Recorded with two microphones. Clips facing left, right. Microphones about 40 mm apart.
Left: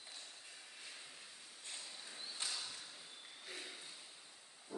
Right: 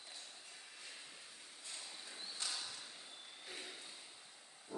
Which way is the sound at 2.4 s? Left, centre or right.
Left.